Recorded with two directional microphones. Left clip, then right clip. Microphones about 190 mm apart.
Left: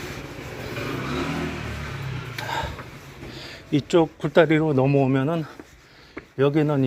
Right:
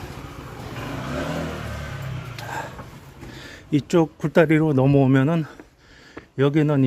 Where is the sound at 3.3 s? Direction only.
45° right (ahead or behind).